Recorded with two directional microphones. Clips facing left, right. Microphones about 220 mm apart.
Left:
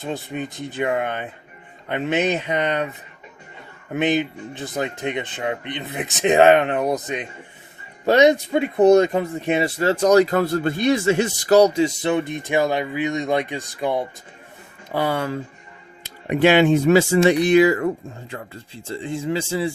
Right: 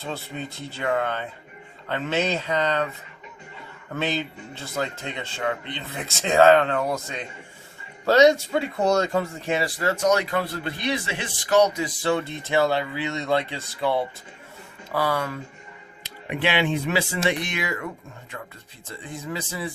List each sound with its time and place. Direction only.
0.0 s speech: 15° left (ahead or behind)
3.9 s speech: 15° left (ahead or behind)
16.3 s speech: 45° left (ahead or behind); by 19.7 s 30° left (ahead or behind)